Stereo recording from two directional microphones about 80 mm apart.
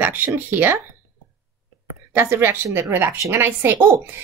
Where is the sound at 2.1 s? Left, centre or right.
Right.